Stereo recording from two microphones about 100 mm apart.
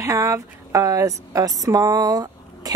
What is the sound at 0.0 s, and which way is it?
Speech, 30° right (ahead or behind).